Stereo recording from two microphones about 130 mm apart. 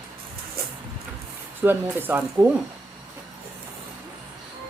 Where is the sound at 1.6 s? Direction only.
15° right (ahead or behind).